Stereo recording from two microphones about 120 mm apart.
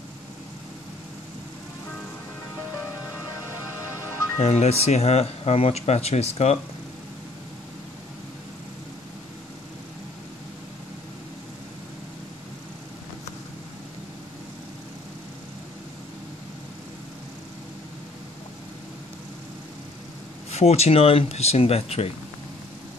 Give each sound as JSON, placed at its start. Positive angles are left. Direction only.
{"t": 3.8, "sound": "music", "side_deg": 20}
{"t": 4.4, "sound": "speech", "side_deg": 60}
{"t": 20.5, "sound": "speech", "side_deg": 60}